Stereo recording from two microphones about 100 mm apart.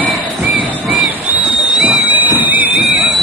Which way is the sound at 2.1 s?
15° right (ahead or behind).